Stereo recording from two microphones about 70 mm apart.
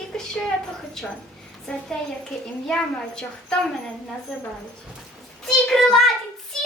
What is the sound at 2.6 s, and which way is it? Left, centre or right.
Speech, centre.